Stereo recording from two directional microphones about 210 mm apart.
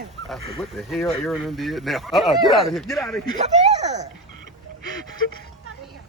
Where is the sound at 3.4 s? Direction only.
30° right (ahead or behind).